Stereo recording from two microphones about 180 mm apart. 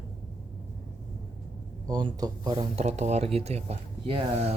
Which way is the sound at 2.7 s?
40° right (ahead or behind).